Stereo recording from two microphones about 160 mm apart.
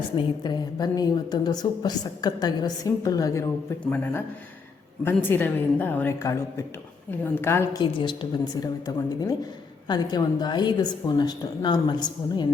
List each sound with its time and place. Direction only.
0.2 s a woman's voice: 25° left (ahead or behind)
5.0 s a woman's voice: 15° left (ahead or behind)
7.8 s a woman's voice: 30° left (ahead or behind)